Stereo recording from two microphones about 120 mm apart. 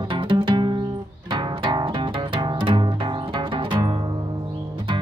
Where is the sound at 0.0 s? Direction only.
40° right (ahead or behind).